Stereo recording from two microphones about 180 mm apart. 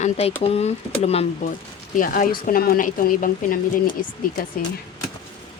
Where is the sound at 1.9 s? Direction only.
50° left (ahead or behind).